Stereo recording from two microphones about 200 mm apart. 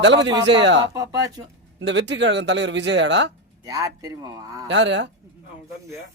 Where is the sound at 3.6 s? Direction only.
15° right (ahead or behind).